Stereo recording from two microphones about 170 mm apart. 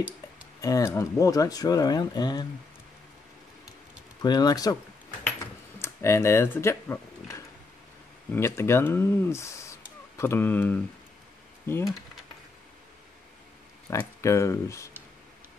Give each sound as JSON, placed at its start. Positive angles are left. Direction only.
{"t": 0.6, "sound": "speech", "side_deg": 20}
{"t": 4.2, "sound": "speech", "side_deg": 25}
{"t": 5.8, "sound": "speech", "side_deg": 15}
{"t": 11.8, "sound": "speech", "side_deg": 0}
{"t": 13.8, "sound": "speech", "side_deg": 15}